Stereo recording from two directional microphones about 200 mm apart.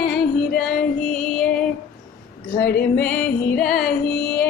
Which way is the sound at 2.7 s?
10° left (ahead or behind).